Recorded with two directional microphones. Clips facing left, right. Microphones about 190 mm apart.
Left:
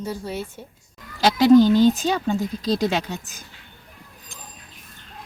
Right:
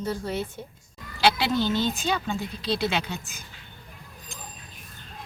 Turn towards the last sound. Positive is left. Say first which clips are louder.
# left 3 dB
turn(degrees=40)  # may be behind; listen again after turning